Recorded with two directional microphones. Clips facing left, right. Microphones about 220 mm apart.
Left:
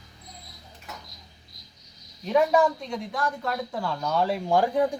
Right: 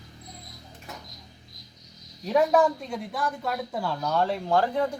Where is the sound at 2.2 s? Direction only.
5° right (ahead or behind).